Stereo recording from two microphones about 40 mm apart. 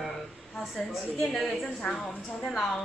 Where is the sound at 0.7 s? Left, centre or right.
Centre.